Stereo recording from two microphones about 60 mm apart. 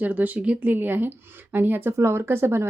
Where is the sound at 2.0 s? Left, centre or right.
Right.